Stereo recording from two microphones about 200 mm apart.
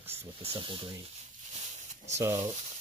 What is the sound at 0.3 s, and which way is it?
Speech, 25° right (ahead or behind).